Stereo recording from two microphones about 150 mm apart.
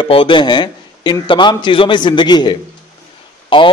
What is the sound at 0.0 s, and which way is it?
A man's voice, 35° left (ahead or behind).